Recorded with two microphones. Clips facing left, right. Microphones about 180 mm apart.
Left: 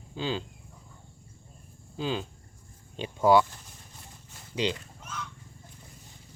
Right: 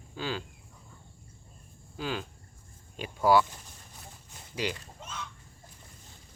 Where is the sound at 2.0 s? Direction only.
20° left (ahead or behind).